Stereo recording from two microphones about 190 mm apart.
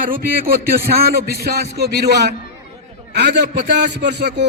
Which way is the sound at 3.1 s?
65° right (ahead or behind).